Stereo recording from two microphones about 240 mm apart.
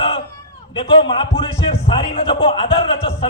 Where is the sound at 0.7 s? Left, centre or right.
Left.